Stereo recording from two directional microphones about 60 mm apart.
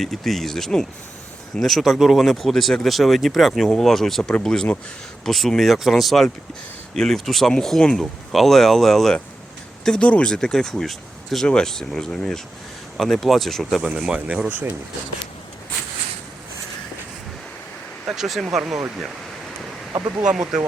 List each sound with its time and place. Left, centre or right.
0.0 s speech: centre
9.8 s speech: centre
10.3 s speech: centre
13.0 s speech: centre
13.8 s speech: centre
14.5 s speech: right
18.0 s speech: centre